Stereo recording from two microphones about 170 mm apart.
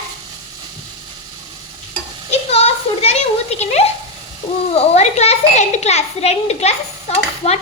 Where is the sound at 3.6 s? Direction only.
40° left (ahead or behind).